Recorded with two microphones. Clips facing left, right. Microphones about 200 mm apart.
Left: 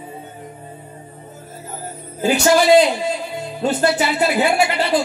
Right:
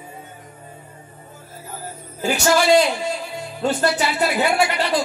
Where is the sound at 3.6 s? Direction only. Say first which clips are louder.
Left 2 dB; 25° left (ahead or behind).